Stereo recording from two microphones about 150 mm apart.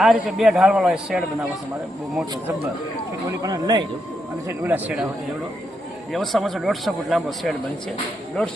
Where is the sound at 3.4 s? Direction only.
25° right (ahead or behind).